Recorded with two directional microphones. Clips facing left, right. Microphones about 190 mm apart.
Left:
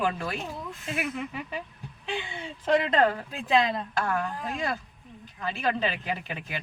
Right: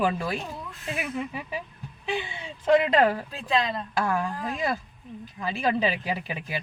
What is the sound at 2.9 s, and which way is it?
Speech, 10° right (ahead or behind).